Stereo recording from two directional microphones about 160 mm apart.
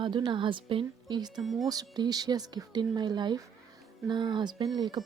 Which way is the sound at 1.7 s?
25° right (ahead or behind).